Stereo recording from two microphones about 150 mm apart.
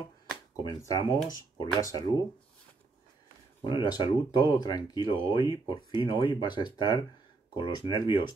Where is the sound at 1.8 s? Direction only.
25° left (ahead or behind).